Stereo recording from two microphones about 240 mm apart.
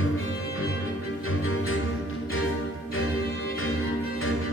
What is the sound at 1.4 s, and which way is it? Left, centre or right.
Music, left.